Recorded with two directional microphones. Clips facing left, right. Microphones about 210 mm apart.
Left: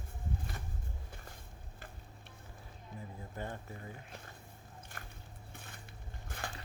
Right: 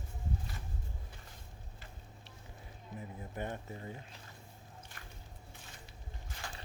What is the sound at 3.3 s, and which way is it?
Speech, 20° right (ahead or behind).